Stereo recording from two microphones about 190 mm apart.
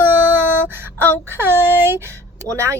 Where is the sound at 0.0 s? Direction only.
10° right (ahead or behind).